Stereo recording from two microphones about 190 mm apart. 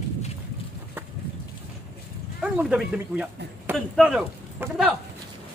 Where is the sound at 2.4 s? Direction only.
5° right (ahead or behind).